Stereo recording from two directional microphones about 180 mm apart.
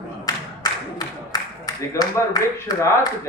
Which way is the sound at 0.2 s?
20° left (ahead or behind).